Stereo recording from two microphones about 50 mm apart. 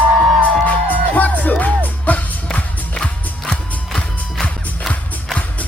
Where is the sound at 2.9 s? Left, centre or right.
Centre.